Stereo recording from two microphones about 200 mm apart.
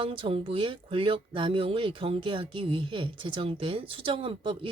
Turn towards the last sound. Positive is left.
turn(degrees=-25)  # may be behind; listen again after turning